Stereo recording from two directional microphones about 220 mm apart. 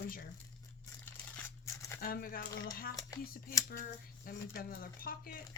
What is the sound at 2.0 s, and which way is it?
Speech, 40° left (ahead or behind).